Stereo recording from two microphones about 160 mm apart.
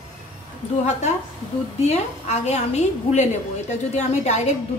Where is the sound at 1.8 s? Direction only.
45° left (ahead or behind).